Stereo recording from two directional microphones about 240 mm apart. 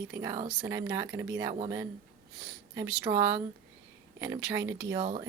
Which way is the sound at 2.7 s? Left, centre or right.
Centre.